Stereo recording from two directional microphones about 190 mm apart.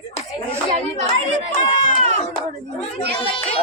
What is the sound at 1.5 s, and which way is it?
Run, 40° left (ahead or behind).